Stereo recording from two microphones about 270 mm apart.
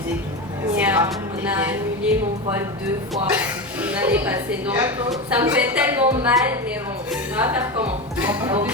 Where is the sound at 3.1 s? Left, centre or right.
Centre.